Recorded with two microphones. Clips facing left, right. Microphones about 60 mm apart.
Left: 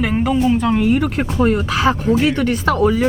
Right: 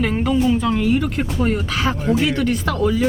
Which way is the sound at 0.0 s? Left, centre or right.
Centre.